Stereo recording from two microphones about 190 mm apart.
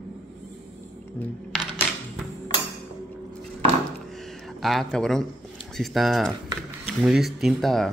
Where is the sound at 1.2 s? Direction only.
10° left (ahead or behind).